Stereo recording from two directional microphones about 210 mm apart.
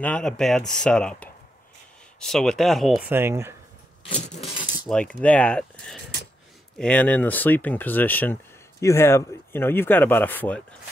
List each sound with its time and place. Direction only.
0.0 s speech: 5° left (ahead or behind)
3.1 s speech: 10° right (ahead or behind)
4.1 s keys jangling: 30° left (ahead or behind)
4.8 s speech: 5° left (ahead or behind)